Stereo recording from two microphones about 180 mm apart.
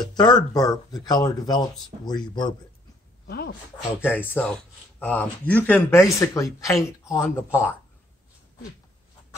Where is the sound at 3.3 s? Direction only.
60° left (ahead or behind).